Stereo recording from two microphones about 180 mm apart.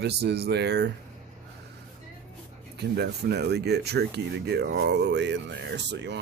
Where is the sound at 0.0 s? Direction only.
65° right (ahead or behind).